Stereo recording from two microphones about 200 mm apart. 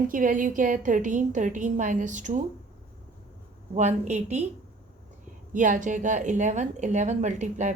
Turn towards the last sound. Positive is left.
turn(degrees=-35)  # may be behind; listen again after turning